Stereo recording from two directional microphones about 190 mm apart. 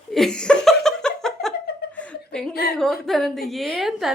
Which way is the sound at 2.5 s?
55° left (ahead or behind).